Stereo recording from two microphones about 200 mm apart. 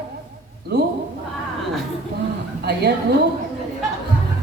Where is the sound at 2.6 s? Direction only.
55° right (ahead or behind).